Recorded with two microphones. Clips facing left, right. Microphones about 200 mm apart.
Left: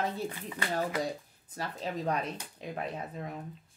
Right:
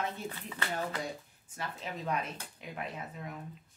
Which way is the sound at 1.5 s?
35° left (ahead or behind).